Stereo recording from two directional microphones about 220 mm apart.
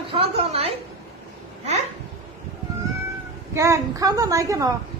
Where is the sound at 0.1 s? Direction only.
25° right (ahead or behind).